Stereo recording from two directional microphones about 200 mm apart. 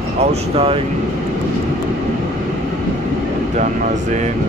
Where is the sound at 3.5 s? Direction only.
35° right (ahead or behind).